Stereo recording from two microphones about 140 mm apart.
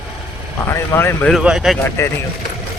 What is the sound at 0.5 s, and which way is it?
Speech, 20° left (ahead or behind).